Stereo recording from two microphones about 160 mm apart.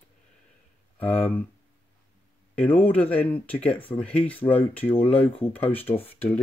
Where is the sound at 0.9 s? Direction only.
10° left (ahead or behind).